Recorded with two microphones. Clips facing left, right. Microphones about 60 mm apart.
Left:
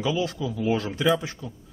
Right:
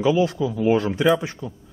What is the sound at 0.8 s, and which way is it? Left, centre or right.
Speech, centre.